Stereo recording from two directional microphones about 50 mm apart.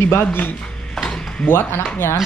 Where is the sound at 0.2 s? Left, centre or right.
Left.